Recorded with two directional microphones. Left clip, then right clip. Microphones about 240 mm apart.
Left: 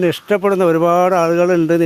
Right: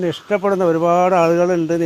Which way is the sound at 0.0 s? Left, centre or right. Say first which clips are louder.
Left 3 dB; left.